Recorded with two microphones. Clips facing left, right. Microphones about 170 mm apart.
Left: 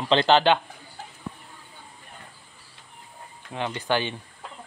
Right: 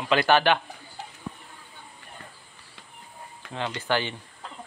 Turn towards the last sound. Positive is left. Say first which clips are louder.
# left 1 dB
turn(degrees=15)  # may be behind; listen again after turning